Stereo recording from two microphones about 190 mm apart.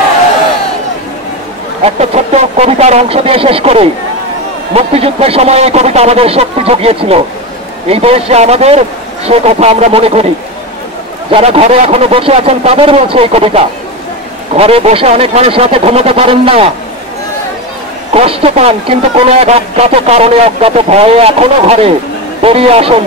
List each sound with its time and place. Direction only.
1.9 s a man's voice: 35° right (ahead or behind)
11.3 s a man's voice: 30° right (ahead or behind)
18.1 s a man's voice: 30° right (ahead or behind)